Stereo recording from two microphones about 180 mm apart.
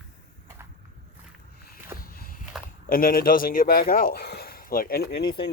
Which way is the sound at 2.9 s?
55° left (ahead or behind).